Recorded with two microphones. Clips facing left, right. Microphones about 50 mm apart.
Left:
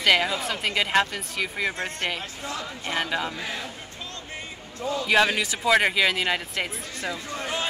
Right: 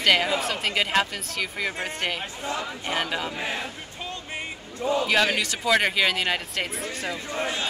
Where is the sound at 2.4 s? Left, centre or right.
Right.